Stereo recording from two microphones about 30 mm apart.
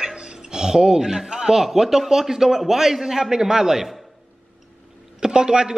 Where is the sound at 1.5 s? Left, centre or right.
Centre.